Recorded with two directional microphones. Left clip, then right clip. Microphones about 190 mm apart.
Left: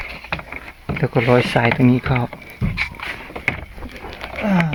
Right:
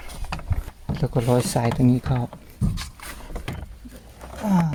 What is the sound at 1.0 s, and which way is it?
Speech, 5° right (ahead or behind).